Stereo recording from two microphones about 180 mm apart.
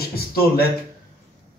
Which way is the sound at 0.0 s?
55° left (ahead or behind).